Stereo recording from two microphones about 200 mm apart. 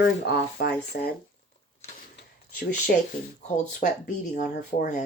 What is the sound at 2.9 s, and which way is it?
Speech, 50° left (ahead or behind).